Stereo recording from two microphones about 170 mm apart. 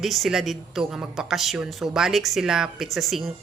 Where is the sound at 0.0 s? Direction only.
Centre (ahead or behind).